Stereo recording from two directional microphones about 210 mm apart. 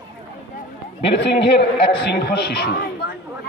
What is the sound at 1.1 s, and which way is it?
Speech, 55° left (ahead or behind).